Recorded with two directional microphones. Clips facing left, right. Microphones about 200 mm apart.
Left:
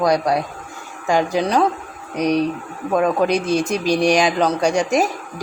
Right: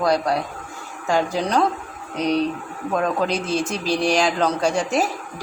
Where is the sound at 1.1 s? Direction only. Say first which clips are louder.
Left 3 dB; 10° left (ahead or behind).